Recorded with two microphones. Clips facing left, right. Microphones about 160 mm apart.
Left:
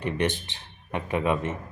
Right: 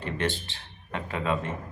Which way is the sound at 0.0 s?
20° left (ahead or behind).